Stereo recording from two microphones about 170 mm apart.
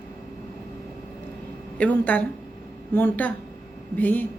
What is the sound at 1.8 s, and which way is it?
Speech, 10° left (ahead or behind).